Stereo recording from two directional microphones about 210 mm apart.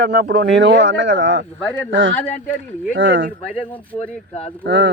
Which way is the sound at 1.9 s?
60° right (ahead or behind).